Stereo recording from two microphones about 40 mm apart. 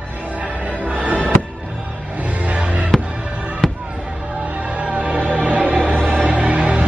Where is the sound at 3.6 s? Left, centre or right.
Centre.